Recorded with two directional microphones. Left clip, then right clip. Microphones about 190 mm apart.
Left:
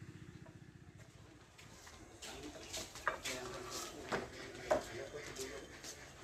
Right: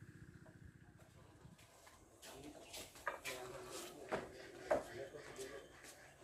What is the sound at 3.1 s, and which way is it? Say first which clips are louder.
Bird: left 6 dB; 20° right (ahead or behind).